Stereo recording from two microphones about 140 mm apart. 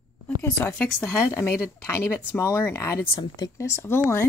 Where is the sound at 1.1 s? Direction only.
20° left (ahead or behind).